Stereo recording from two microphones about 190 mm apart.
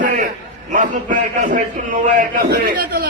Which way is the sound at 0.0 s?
45° right (ahead or behind).